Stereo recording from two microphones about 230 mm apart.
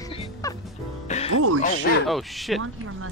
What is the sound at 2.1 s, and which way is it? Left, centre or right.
Speech, centre.